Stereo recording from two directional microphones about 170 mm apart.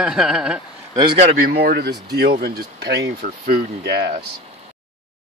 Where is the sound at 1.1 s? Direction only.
55° right (ahead or behind).